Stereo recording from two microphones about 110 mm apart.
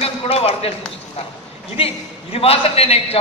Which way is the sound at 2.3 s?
65° left (ahead or behind).